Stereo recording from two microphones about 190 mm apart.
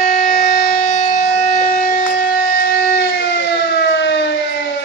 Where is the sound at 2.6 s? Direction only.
60° left (ahead or behind).